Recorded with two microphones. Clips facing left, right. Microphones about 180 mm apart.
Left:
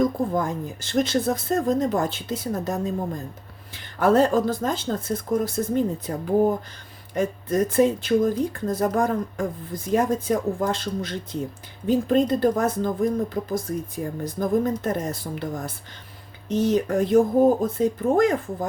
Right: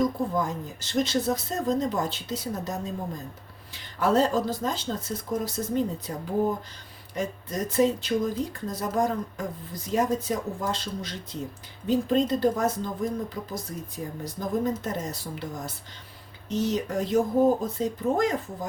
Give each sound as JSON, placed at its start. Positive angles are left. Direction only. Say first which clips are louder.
{"t": 0.0, "sound": "speech", "louder": "left 3 dB", "side_deg": 55}
{"t": 4.0, "sound": "speech", "louder": "left 4 dB", "side_deg": 55}
{"t": 7.1, "sound": "speech", "louder": "left 7 dB", "side_deg": 55}